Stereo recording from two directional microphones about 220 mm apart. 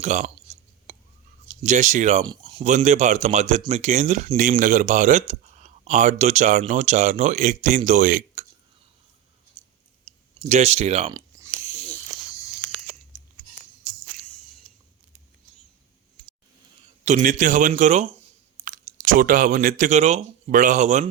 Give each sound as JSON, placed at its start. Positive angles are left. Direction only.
{"t": 0.0, "sound": "speech", "side_deg": -30}
{"t": 0.9, "sound": "whispering", "side_deg": -35}
{"t": 1.6, "sound": "speech", "side_deg": -35}
{"t": 2.2, "sound": "speech", "side_deg": -20}
{"t": 2.6, "sound": "speech", "side_deg": -35}
{"t": 10.1, "sound": "speech", "side_deg": -30}
{"t": 11.1, "sound": "a sound", "side_deg": -15}
{"t": 11.9, "sound": "snake", "side_deg": 15}
{"t": 17.1, "sound": "speech", "side_deg": -35}